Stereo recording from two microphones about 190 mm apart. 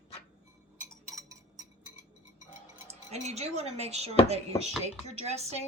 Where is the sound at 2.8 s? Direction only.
35° right (ahead or behind).